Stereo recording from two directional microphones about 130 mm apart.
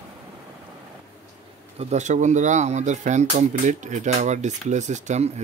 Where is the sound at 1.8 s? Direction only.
60° right (ahead or behind).